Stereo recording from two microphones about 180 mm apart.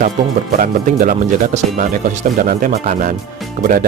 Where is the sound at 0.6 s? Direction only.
50° right (ahead or behind).